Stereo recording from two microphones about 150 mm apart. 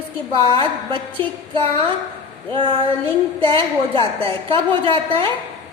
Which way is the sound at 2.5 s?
35° right (ahead or behind).